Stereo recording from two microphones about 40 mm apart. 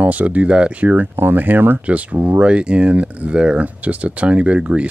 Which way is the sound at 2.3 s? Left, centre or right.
Right.